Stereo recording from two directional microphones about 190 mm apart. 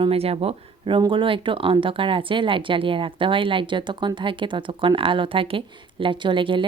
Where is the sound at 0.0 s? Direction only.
30° right (ahead or behind).